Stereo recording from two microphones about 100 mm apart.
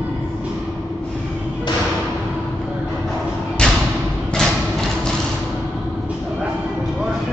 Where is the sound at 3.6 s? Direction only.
10° left (ahead or behind).